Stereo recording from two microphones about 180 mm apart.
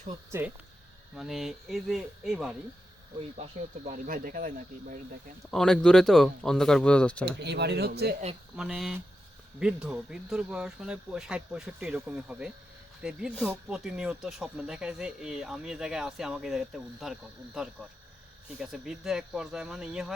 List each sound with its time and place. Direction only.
0.3 s speech: 10° right (ahead or behind)
1.1 s speech: centre (ahead or behind)
3.2 s speech: 35° right (ahead or behind)
5.5 s speech: 5° left (ahead or behind)
7.3 s speech: 70° right (ahead or behind)
8.5 s speech: 5° right (ahead or behind)